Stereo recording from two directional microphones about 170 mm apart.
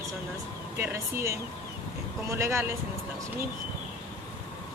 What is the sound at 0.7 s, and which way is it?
Speech, 15° right (ahead or behind).